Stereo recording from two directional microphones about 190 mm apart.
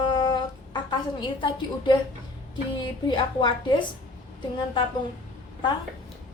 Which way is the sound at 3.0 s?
25° left (ahead or behind).